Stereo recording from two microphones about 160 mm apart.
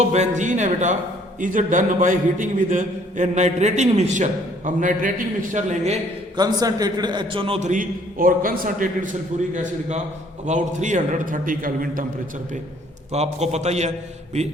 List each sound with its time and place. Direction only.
0.0 s a man's voice: 45° right (ahead or behind)
6.3 s a man's voice: 25° right (ahead or behind)
7.7 s a man's voice: 55° right (ahead or behind)
10.4 s a man's voice: 50° right (ahead or behind)
13.1 s a man's voice: 45° right (ahead or behind)